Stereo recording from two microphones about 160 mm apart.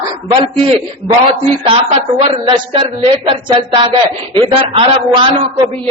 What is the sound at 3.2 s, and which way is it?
A woman's voice, 30° right (ahead or behind).